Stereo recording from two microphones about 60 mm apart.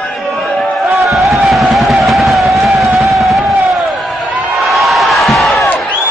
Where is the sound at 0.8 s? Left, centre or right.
Centre.